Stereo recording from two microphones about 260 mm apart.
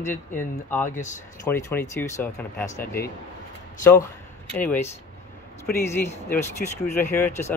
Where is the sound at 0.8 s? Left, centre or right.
Left.